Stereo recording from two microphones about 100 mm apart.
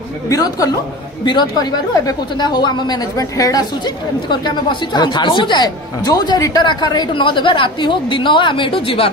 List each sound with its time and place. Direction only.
0.3 s a woman's voice: 35° left (ahead or behind); by 9.1 s 65° left (ahead or behind)